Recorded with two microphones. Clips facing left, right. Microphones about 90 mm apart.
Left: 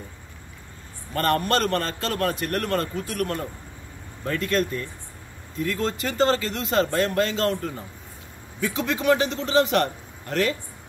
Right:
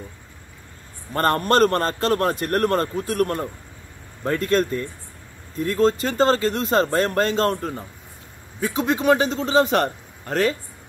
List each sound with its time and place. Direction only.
1.1 s a man's voice: 35° right (ahead or behind)